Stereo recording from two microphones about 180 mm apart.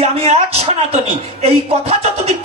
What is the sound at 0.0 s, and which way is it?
Speech, 35° right (ahead or behind).